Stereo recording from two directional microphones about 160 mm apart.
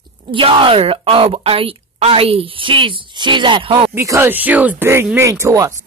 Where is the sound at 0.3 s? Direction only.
30° right (ahead or behind).